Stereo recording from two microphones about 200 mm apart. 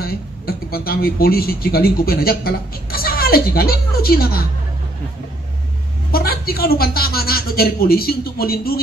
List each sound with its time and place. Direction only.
0.0 s speech: 50° left (ahead or behind)
6.1 s a man's voice: 50° left (ahead or behind)